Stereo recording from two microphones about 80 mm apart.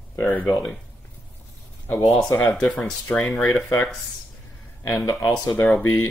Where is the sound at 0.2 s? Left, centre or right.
Left.